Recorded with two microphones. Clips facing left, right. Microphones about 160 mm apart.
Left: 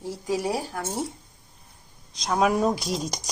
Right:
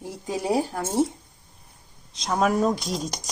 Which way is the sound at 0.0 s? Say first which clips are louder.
Left 2 dB; 20° right (ahead or behind).